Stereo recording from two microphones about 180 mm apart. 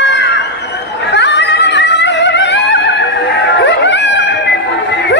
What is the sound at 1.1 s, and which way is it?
Singing, 75° left (ahead or behind).